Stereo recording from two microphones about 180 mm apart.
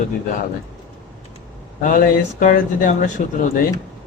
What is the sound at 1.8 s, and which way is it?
Speech, 50° left (ahead or behind).